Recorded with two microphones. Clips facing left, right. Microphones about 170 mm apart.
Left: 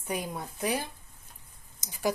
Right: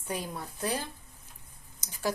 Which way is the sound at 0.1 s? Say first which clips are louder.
Left 2 dB; 15° left (ahead or behind).